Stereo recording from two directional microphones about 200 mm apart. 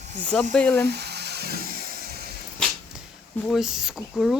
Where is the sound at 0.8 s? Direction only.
55° right (ahead or behind).